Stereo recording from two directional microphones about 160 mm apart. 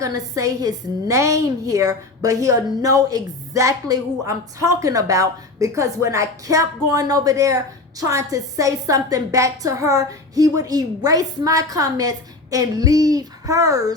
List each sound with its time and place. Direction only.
0.0 s a woman's voice: 20° right (ahead or behind)